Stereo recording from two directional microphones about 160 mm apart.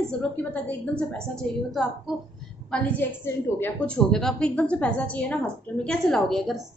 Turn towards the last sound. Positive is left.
turn(degrees=0)  # may be behind; listen again after turning